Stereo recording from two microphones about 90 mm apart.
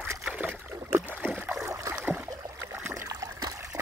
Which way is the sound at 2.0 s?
20° right (ahead or behind).